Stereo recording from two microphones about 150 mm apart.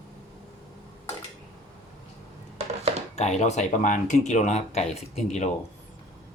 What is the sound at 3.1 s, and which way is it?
Speech, 50° left (ahead or behind).